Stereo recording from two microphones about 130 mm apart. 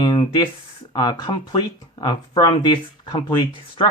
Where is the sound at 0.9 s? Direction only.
35° left (ahead or behind).